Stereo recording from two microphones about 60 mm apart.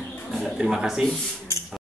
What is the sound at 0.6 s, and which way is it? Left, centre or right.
Speech, centre.